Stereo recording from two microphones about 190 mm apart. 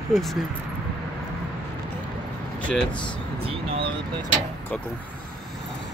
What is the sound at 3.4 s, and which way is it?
Speech, 30° right (ahead or behind).